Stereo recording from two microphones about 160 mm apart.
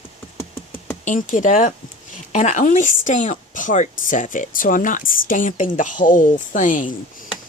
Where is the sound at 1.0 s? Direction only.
55° left (ahead or behind).